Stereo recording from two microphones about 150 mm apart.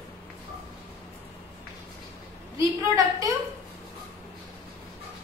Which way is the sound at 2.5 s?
20° right (ahead or behind).